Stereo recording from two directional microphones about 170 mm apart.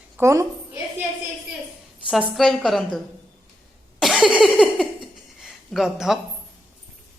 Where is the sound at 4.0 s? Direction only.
Centre (ahead or behind).